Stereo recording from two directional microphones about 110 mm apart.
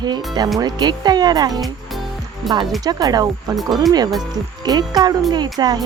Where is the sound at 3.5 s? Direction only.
Centre (ahead or behind).